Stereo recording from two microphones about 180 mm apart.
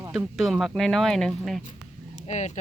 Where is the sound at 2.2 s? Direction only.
40° left (ahead or behind).